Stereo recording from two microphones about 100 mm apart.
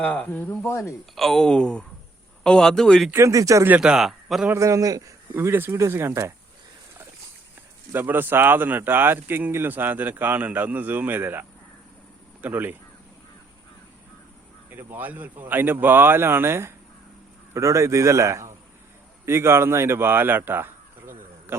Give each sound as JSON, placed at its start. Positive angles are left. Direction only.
{"t": 0.0, "sound": "speech", "side_deg": 15}
{"t": 1.1, "sound": "speech", "side_deg": 0}
{"t": 3.1, "sound": "a man's voice", "side_deg": -30}
{"t": 3.7, "sound": "a man's voice", "side_deg": -10}
{"t": 4.4, "sound": "a man's voice", "side_deg": -30}
{"t": 5.3, "sound": "speech", "side_deg": -20}
{"t": 7.9, "sound": "speech", "side_deg": -20}
{"t": 14.7, "sound": "speech", "side_deg": -20}